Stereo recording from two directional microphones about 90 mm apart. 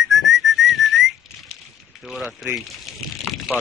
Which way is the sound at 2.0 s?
Centre (ahead or behind).